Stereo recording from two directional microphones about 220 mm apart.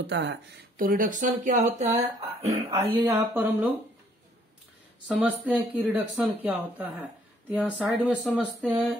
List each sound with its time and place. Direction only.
0.0 s speech: 55° right (ahead or behind)
0.7 s speech: 40° right (ahead or behind)
2.7 s speech: 15° right (ahead or behind)
5.0 s speech: 5° right (ahead or behind)